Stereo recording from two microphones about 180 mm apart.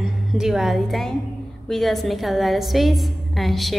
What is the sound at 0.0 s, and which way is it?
A woman's voice, 5° right (ahead or behind).